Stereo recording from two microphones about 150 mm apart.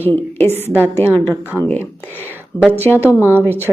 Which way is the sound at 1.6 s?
15° left (ahead or behind).